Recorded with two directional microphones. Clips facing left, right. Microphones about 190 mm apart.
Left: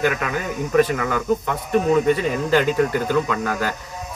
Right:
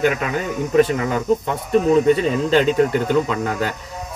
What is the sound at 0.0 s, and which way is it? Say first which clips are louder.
Speech: right 2 dB; 25° right (ahead or behind).